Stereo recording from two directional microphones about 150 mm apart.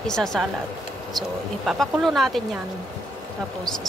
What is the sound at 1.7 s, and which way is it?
Speech, centre (ahead or behind).